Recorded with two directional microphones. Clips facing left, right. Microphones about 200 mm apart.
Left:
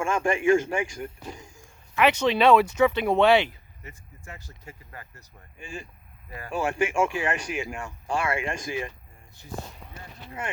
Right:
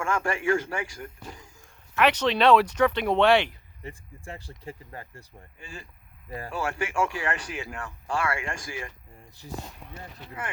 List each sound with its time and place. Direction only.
0.0 s speech: 15° left (ahead or behind)
3.8 s speech: 30° right (ahead or behind)
5.5 s speech: 15° left (ahead or behind)
9.4 s speech: 35° right (ahead or behind)